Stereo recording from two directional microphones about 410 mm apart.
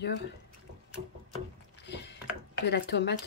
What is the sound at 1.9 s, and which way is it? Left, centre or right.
Ratchet, left.